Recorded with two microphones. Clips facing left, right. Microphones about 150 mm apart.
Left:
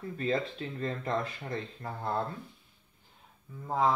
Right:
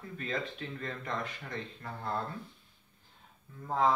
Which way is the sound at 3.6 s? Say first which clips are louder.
Left 1 dB; 10° left (ahead or behind).